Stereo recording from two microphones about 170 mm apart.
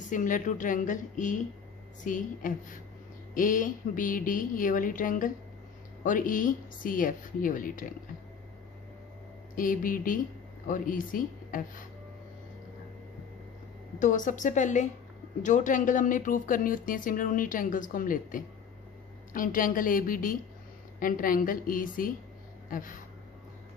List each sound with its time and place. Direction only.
0.1 s a woman's voice: 50° left (ahead or behind)
9.6 s a woman's voice: 55° left (ahead or behind)
14.0 s a woman's voice: 50° left (ahead or behind)